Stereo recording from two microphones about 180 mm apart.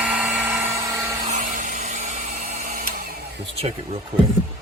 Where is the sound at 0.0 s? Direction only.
5° right (ahead or behind).